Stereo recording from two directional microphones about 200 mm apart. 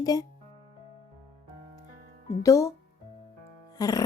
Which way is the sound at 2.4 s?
15° left (ahead or behind).